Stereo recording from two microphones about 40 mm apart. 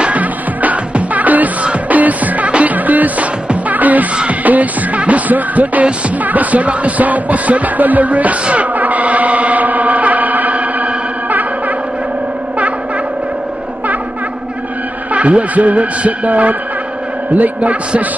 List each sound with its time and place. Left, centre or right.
0.0 s music: right
15.1 s a woman's voice: right